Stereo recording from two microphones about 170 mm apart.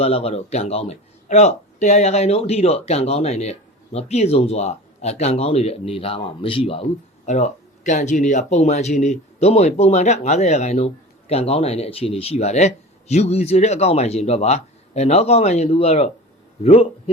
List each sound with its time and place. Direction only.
0.0 s speech: 35° left (ahead or behind)
7.3 s speech: 45° left (ahead or behind)